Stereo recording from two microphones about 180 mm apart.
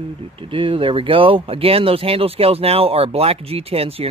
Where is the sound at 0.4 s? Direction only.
30° right (ahead or behind).